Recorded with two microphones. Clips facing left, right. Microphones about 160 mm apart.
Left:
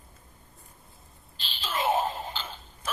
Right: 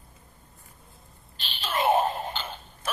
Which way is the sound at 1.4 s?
65° right (ahead or behind).